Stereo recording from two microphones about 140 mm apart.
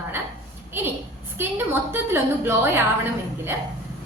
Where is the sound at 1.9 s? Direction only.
15° right (ahead or behind).